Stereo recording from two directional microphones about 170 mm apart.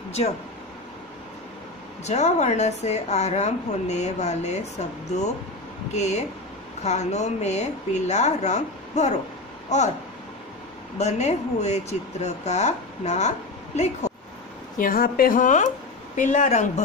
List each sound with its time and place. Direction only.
2.0 s speech: 40° left (ahead or behind)
11.0 s a woman's voice: 40° left (ahead or behind)
14.8 s a woman's voice: 60° left (ahead or behind); by 16.8 s 45° left (ahead or behind)